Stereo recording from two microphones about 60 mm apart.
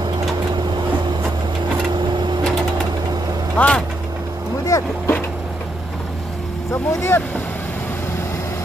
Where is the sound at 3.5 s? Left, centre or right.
Left.